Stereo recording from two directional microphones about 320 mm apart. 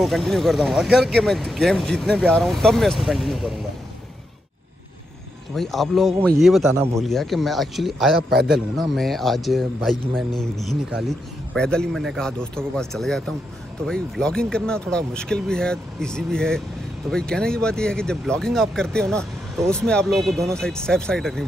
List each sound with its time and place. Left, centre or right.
0.0 s speech: centre
5.5 s speech: centre
8.2 s a man's voice: right
8.5 s speech: centre